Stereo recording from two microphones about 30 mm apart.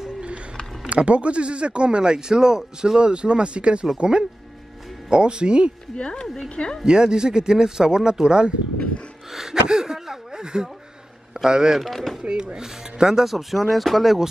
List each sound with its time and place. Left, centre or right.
0.8 s speech: right
5.1 s speech: right
5.9 s speech: left
6.8 s speech: right
9.3 s a sound: centre
10.4 s speech: right
11.8 s speech: centre
12.2 s speech: right
13.2 s speech: centre